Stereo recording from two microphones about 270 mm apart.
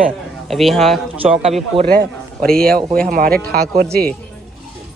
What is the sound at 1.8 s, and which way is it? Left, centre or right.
Speech, right.